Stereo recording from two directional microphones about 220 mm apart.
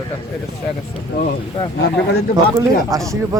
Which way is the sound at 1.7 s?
50° left (ahead or behind).